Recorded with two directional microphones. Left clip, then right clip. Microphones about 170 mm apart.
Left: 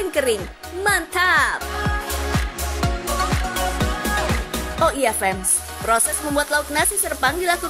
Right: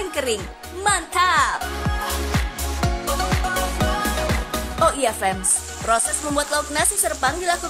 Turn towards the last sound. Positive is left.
turn(degrees=20)  # may be behind; listen again after turning